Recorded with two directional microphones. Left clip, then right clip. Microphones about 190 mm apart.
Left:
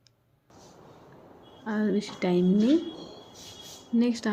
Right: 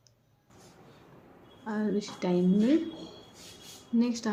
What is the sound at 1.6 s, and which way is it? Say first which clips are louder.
A woman's voice: left 3 dB; 20° left (ahead or behind).